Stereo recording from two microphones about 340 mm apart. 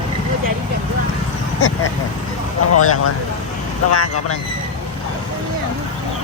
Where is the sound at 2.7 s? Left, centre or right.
Left.